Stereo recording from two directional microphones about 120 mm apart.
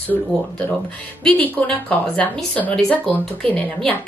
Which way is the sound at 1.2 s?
15° left (ahead or behind).